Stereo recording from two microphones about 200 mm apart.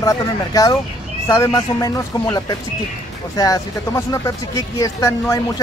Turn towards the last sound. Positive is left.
turn(degrees=15)  # may be behind; listen again after turning